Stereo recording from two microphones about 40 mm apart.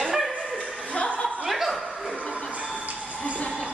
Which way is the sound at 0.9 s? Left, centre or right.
Left.